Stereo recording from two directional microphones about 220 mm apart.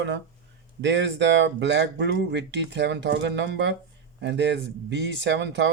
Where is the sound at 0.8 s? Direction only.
55° right (ahead or behind).